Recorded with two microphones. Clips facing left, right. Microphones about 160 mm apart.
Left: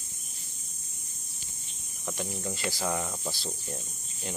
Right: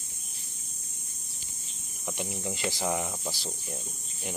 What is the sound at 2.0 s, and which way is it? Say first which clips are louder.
Speech: even; 15° right (ahead or behind).